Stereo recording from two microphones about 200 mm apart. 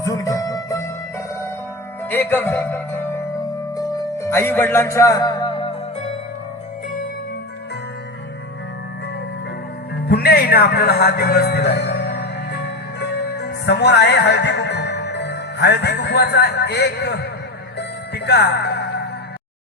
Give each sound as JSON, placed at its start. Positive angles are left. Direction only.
{"t": 0.0, "sound": "music", "side_deg": 15}
{"t": 2.0, "sound": "music", "side_deg": 10}
{"t": 10.1, "sound": "music", "side_deg": 50}